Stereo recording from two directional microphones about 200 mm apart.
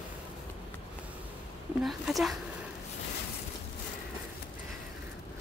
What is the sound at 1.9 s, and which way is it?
Speech, centre (ahead or behind).